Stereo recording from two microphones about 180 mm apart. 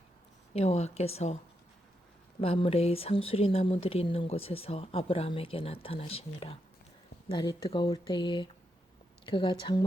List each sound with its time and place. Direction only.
0.5 s speech: 35° left (ahead or behind)
2.4 s speech: 30° left (ahead or behind)
7.3 s speech: 20° left (ahead or behind)